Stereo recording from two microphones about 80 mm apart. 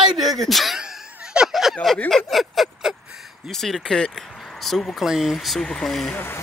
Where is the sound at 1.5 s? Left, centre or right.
Centre.